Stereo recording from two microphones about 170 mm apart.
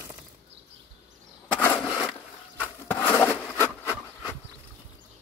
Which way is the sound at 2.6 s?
10° left (ahead or behind).